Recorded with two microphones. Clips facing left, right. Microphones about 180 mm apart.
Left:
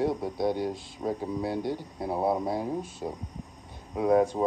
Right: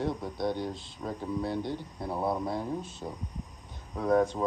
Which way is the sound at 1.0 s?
30° left (ahead or behind).